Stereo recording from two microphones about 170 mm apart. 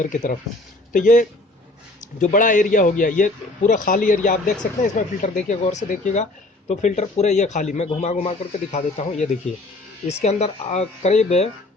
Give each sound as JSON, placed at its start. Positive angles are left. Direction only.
{"t": 0.0, "sound": "a man's voice", "side_deg": 50}